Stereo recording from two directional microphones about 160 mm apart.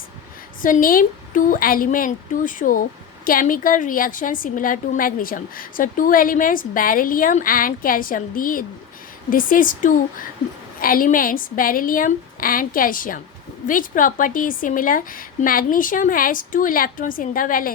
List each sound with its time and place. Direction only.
0.6 s a woman's voice: 60° left (ahead or behind)